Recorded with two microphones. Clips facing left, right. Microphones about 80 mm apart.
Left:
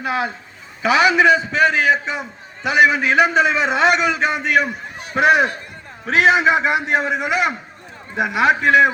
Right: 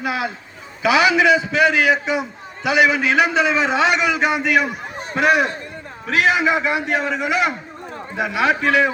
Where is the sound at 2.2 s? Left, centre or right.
Centre.